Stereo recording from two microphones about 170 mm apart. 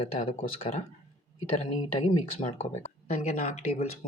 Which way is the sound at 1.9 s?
35° left (ahead or behind).